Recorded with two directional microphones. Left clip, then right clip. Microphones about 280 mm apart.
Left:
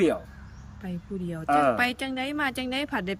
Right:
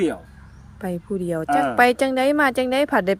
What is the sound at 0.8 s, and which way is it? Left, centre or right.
Speech, centre.